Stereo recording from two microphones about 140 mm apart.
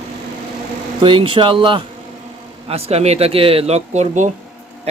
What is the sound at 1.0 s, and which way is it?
Speech, 35° right (ahead or behind).